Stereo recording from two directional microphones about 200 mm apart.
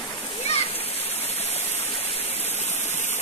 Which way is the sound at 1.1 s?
30° left (ahead or behind).